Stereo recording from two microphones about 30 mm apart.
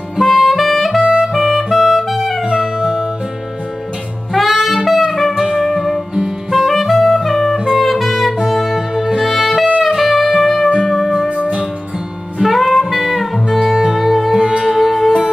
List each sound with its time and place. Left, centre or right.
0.2 s music: centre
2.5 s music: centre
4.3 s saxophone: centre
5.0 s music: centre
11.2 s music: right
12.4 s music: centre
13.7 s music: centre